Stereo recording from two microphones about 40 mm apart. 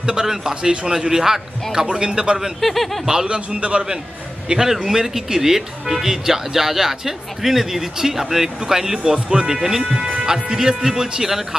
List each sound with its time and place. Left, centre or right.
0.0 s speech: centre
2.6 s speech: centre
3.3 s a man's voice: right; by 9.0 s centre
9.0 s a man's voice: right
9.5 s speech: centre